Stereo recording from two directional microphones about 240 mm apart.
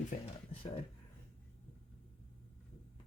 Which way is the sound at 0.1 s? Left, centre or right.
Left.